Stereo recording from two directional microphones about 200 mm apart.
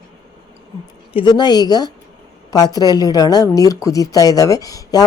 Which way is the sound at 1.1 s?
20° left (ahead or behind).